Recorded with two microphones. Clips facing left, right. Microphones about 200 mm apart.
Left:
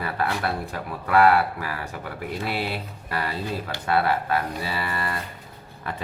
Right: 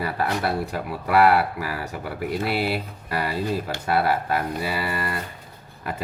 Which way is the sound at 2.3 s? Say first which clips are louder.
Right 4 dB; 10° right (ahead or behind).